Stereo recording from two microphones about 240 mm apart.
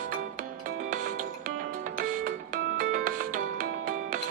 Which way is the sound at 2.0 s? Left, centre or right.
Right.